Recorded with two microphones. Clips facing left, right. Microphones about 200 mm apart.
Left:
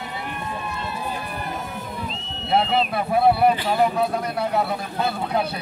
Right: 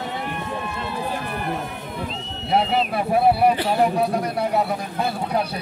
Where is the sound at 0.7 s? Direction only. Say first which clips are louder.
Right 2 dB; 75° right (ahead or behind).